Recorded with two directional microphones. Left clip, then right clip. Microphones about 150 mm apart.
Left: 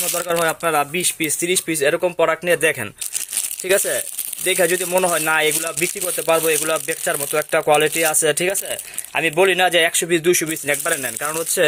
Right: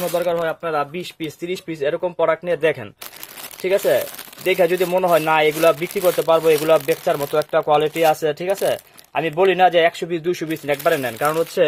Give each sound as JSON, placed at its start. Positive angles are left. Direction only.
{"t": 0.0, "sound": "speech", "side_deg": 5}